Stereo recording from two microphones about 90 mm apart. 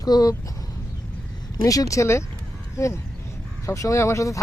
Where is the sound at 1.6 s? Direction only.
40° left (ahead or behind).